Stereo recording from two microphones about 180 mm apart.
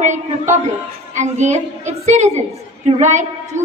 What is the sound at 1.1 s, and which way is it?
A woman's voice, 40° right (ahead or behind).